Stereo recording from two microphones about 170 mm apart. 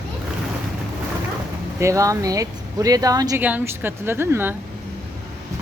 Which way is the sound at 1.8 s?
20° right (ahead or behind).